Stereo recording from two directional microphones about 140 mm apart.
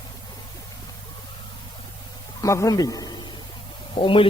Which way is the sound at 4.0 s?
35° left (ahead or behind).